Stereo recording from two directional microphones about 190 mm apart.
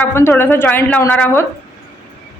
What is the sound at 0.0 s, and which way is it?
A man's voice, 15° left (ahead or behind).